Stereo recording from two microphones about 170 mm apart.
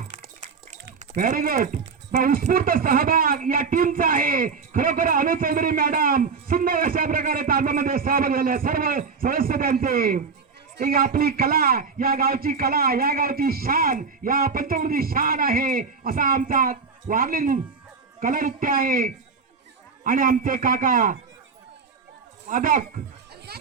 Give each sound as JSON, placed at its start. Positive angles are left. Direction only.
{"t": 1.1, "sound": "a man's voice", "side_deg": -50}
{"t": 22.4, "sound": "a man's voice", "side_deg": -50}
{"t": 23.5, "sound": "a sound", "side_deg": -70}